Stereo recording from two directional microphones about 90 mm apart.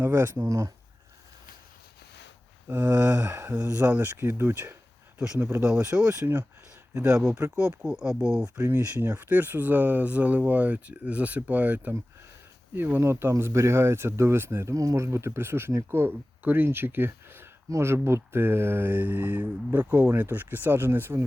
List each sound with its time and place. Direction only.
0.0 s speech: 30° right (ahead or behind)
2.6 s speech: 20° right (ahead or behind)
5.6 s speech: 15° right (ahead or behind)
8.5 s speech: 20° right (ahead or behind)